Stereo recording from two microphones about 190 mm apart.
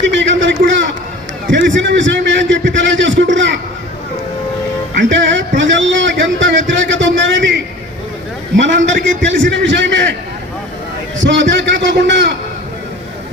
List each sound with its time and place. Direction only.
0.0 s a sound: 75° right (ahead or behind)
1.5 s a man's voice: 70° right (ahead or behind)
4.9 s a man's voice: 70° right (ahead or behind)
11.2 s a man's voice: 75° right (ahead or behind)